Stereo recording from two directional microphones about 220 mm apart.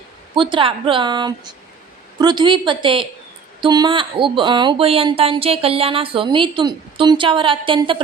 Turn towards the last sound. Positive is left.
turn(degrees=-20)  # may be behind; listen again after turning